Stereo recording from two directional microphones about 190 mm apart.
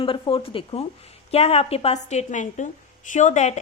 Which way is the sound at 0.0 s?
30° left (ahead or behind).